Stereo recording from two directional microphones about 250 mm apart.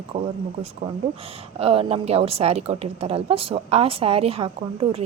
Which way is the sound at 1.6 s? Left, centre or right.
Right.